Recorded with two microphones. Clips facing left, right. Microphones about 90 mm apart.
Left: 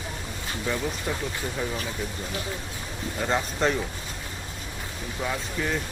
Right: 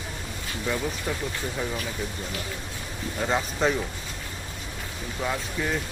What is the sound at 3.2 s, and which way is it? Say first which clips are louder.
Speech: even; centre (ahead or behind).